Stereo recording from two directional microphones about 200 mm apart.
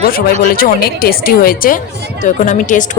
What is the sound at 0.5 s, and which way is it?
A woman's voice, 45° left (ahead or behind).